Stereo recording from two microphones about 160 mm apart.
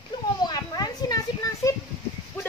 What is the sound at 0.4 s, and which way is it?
Children playing, 25° left (ahead or behind).